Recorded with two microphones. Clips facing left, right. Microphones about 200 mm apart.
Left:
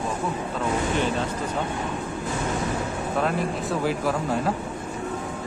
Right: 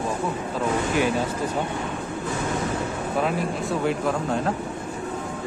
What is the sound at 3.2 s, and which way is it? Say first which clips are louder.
Speech: right 1 dB; centre (ahead or behind).